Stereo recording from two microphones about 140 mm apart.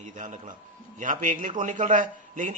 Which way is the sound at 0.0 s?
60° right (ahead or behind).